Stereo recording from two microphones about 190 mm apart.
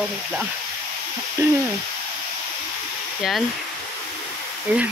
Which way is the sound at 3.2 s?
Centre (ahead or behind).